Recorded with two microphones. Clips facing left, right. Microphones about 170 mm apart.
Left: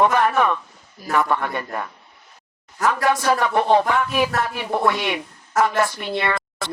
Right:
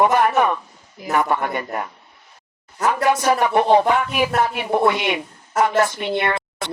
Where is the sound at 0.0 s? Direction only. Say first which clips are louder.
Right 1 dB; 10° right (ahead or behind).